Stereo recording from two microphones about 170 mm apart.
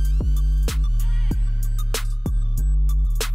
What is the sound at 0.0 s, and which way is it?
Music, centre (ahead or behind).